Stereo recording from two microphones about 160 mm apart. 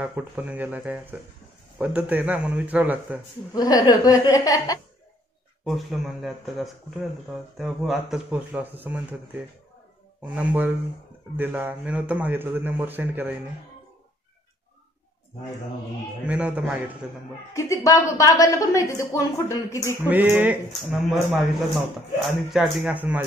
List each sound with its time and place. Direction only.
0.0 s a man's voice: 10° right (ahead or behind)
3.5 s a woman's voice: 25° left (ahead or behind)
5.7 s speech: centre (ahead or behind)
10.3 s a man's voice: 10° right (ahead or behind)
16.3 s a man's voice: 10° right (ahead or behind)
17.6 s a woman's voice: 20° left (ahead or behind)
20.1 s a man's voice: 10° right (ahead or behind)
20.9 s speech: centre (ahead or behind)
22.5 s a man's voice: 5° right (ahead or behind)